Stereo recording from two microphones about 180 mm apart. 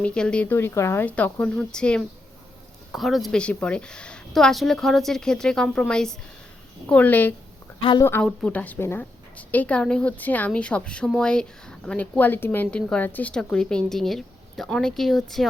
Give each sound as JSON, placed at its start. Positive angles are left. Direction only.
{"t": 0.0, "sound": "a woman's voice", "side_deg": 5}
{"t": 7.8, "sound": "a woman's voice", "side_deg": 25}
{"t": 8.0, "sound": "a woman's voice", "side_deg": 10}